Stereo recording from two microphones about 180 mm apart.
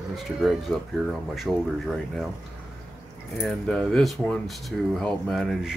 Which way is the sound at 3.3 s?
5° left (ahead or behind).